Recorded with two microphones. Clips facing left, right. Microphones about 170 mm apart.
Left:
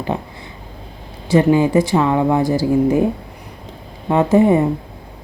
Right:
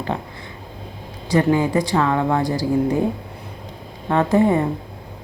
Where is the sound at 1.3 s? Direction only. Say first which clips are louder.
Left 4 dB; 20° left (ahead or behind).